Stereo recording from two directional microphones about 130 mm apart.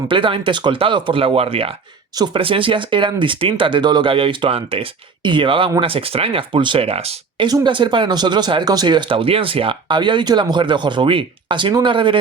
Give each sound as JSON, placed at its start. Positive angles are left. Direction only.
{"t": 0.1, "sound": "speech", "side_deg": -40}
{"t": 7.4, "sound": "speech", "side_deg": -35}